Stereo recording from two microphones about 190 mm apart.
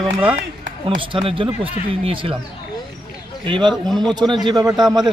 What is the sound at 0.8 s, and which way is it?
Speech, 25° right (ahead or behind).